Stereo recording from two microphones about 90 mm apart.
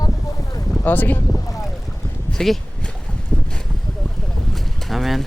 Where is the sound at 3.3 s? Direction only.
5° left (ahead or behind).